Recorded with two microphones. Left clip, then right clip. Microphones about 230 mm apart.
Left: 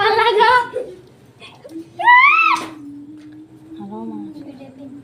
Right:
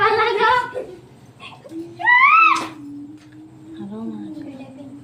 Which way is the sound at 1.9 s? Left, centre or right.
Left.